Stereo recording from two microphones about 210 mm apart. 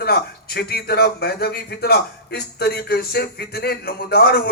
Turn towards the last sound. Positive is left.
turn(degrees=45)  # may be behind; listen again after turning